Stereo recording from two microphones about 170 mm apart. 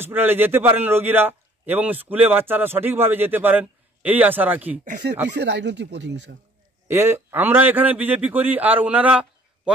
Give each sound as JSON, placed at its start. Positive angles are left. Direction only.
{"t": 0.0, "sound": "a man's voice", "side_deg": -10}
{"t": 5.3, "sound": "speech", "side_deg": -90}
{"t": 6.9, "sound": "a man's voice", "side_deg": -15}